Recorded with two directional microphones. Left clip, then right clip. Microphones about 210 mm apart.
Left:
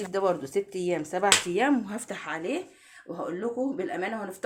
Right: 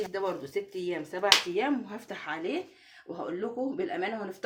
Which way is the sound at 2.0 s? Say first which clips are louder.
Right 1 dB; 25° left (ahead or behind).